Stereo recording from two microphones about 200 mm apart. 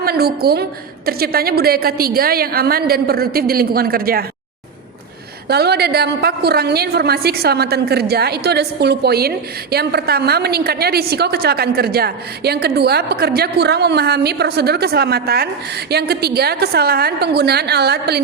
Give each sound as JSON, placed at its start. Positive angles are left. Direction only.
{"t": 0.0, "sound": "a woman's voice", "side_deg": -50}
{"t": 5.5, "sound": "a woman's voice", "side_deg": -55}